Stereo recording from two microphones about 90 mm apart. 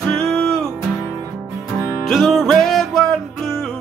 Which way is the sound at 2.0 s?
Centre (ahead or behind).